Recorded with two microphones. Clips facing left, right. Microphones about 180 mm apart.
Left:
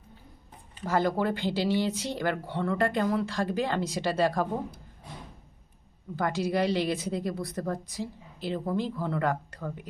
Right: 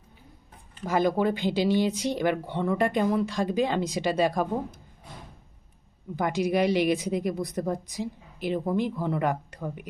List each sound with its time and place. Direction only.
0.9 s a woman's voice: 15° right (ahead or behind)
6.1 s a woman's voice: 15° right (ahead or behind)